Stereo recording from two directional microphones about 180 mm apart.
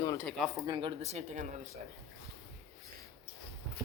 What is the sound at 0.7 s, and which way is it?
Speech, 25° right (ahead or behind).